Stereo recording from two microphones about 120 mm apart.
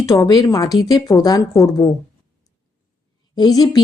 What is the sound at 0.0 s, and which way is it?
Speech, 25° left (ahead or behind).